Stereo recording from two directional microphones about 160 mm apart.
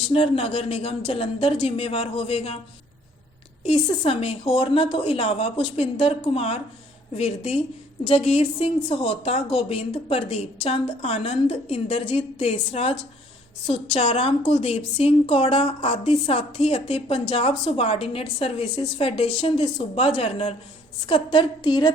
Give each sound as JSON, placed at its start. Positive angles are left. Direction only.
{"t": 0.1, "sound": "a woman's voice", "side_deg": 35}
{"t": 3.6, "sound": "a woman's voice", "side_deg": 40}